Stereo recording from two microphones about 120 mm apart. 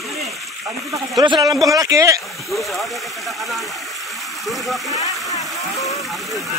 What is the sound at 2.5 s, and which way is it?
Speech, centre (ahead or behind).